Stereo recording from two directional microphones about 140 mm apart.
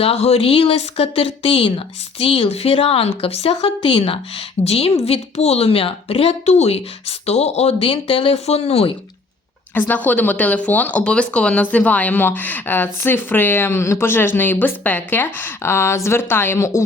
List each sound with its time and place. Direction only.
0.0 s speech: 45° left (ahead or behind)
9.7 s speech: 15° left (ahead or behind)